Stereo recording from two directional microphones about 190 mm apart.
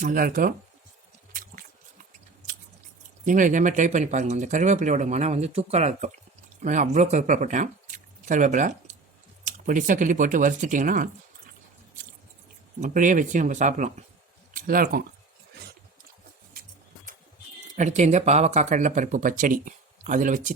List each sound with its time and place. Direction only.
0.0 s speech: 45° right (ahead or behind)
1.3 s squish: 45° right (ahead or behind)
3.2 s speech: 40° right (ahead or behind)
12.8 s speech: 40° right (ahead or behind)
17.7 s speech: 40° right (ahead or behind)